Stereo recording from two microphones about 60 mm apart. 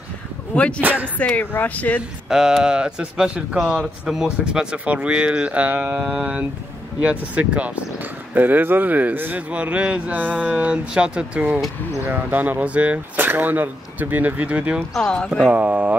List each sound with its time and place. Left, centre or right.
0.7 s speech: right
1.1 s speech: left
2.2 s speech: centre; by 9.4 s right
9.5 s speech: right
14.8 s speech: centre
15.4 s speech: right